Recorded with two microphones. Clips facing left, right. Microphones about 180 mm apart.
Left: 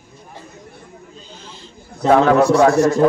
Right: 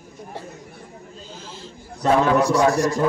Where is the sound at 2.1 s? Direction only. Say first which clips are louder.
Left 5 dB; 55° left (ahead or behind).